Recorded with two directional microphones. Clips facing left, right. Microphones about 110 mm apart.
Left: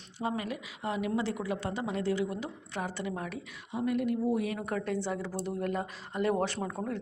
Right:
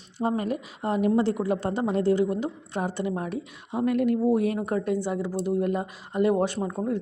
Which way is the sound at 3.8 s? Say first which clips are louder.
Right 6 dB; 70° right (ahead or behind).